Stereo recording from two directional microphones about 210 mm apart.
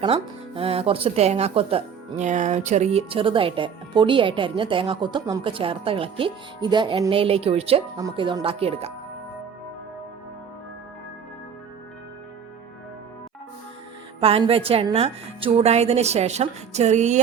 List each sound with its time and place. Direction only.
0.0 s speech: 30° right (ahead or behind)
14.2 s speech: 25° right (ahead or behind)